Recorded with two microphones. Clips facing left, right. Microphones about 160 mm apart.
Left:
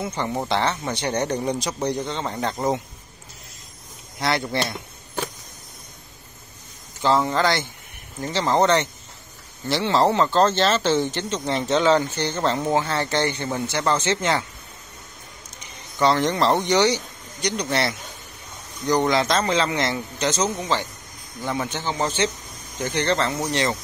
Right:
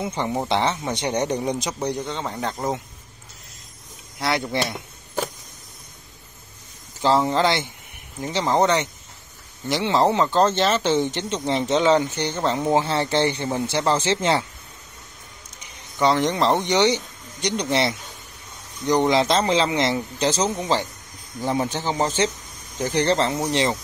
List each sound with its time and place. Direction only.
0.0 s speech: 20° right (ahead or behind); by 2.8 s 5° left (ahead or behind)
4.2 s speech: 10° right (ahead or behind)
7.2 s a man's voice: 20° right (ahead or behind)
12.7 s a man's voice: 25° right (ahead or behind)
16.0 s a man's voice: 15° right (ahead or behind); by 23.3 s 30° right (ahead or behind)